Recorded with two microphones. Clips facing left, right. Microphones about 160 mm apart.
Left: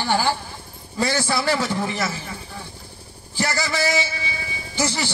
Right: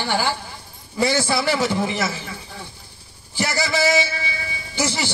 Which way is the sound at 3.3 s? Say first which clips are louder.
Right 2 dB; 15° right (ahead or behind).